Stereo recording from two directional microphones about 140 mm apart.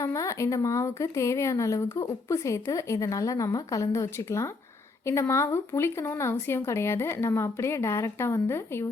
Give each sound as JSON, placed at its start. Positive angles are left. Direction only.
{"t": 0.0, "sound": "speech", "side_deg": 20}